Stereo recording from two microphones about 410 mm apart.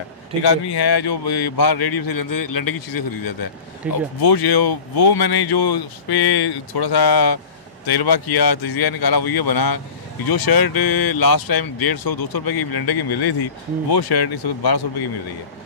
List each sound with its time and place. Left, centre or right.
0.4 s speech: left
3.8 s speech: centre
4.2 s speech: left